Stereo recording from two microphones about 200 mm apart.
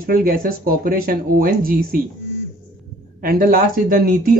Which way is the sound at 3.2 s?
45° right (ahead or behind).